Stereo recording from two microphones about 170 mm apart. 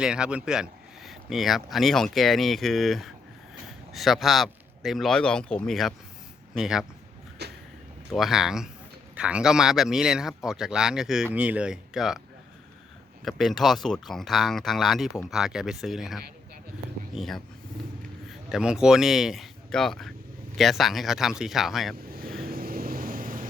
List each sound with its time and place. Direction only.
0.0 s speech: 5° right (ahead or behind)
7.4 s vehicle: 75° right (ahead or behind)
8.1 s speech: centre (ahead or behind)
13.2 s speech: centre (ahead or behind)
22.1 s vehicle: 60° right (ahead or behind)